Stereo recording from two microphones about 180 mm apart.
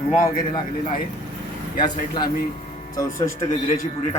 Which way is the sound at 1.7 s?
25° left (ahead or behind).